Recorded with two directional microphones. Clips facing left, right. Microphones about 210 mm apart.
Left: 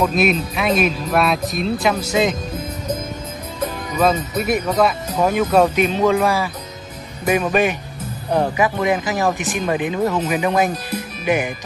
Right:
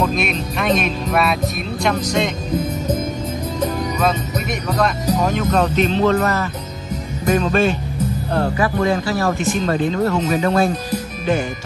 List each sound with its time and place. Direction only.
0.0 s speech: 5° left (ahead or behind)
4.0 s speech: 5° left (ahead or behind)